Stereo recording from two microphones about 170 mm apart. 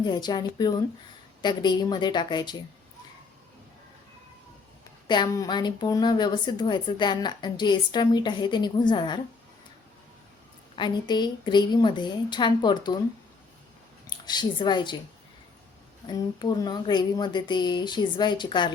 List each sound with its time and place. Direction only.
0.0 s speech: 25° left (ahead or behind)
5.0 s speech: 25° left (ahead or behind)
10.8 s speech: 25° left (ahead or behind)
14.1 s a woman's voice: 25° left (ahead or behind)
16.0 s speech: 25° left (ahead or behind)